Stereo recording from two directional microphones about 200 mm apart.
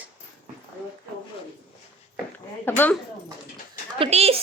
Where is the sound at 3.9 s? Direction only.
30° right (ahead or behind).